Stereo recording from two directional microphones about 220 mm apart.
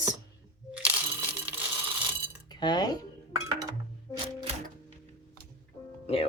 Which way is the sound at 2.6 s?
20° left (ahead or behind).